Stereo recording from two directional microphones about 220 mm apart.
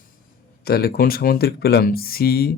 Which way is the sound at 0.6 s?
45° left (ahead or behind).